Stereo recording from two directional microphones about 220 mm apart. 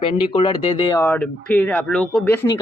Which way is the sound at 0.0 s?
25° left (ahead or behind).